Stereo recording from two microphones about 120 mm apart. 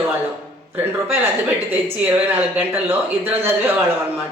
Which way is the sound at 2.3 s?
15° right (ahead or behind).